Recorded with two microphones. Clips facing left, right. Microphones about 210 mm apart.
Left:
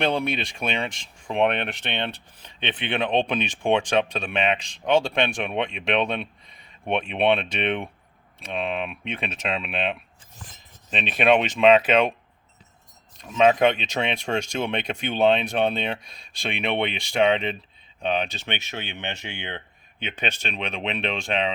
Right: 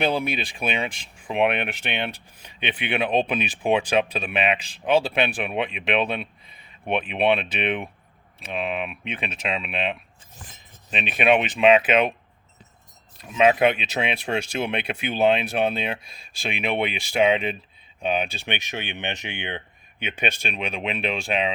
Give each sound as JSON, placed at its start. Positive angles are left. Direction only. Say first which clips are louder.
{"t": 0.0, "sound": "speech", "louder": "even", "side_deg": -5}
{"t": 13.1, "sound": "speech", "louder": "even", "side_deg": -5}